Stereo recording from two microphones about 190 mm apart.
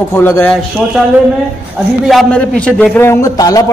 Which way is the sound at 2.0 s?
5° left (ahead or behind).